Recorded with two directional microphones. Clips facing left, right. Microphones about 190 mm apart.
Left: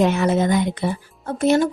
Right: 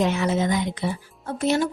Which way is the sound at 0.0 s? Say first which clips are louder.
Left 4 dB; 55° left (ahead or behind).